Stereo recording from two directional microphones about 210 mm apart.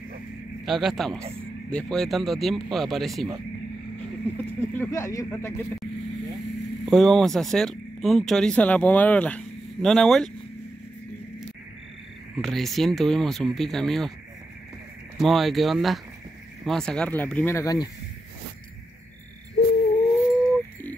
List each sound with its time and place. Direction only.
0.7 s speech: centre (ahead or behind)
4.6 s speech: 10° left (ahead or behind)
6.9 s speech: centre (ahead or behind)
12.4 s speech: centre (ahead or behind)
15.1 s speech: centre (ahead or behind)
19.6 s a sound: 50° left (ahead or behind)
20.2 s bird: 15° left (ahead or behind)